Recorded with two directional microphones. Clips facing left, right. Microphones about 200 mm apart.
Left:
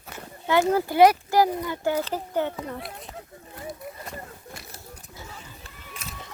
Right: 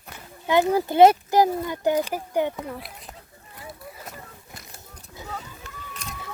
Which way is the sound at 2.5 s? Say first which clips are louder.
Even; centre (ahead or behind).